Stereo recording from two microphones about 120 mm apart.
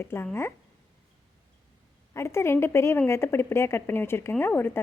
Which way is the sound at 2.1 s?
20° left (ahead or behind).